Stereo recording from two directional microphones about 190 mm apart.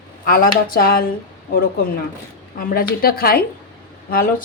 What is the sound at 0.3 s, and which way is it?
Speech, 50° left (ahead or behind).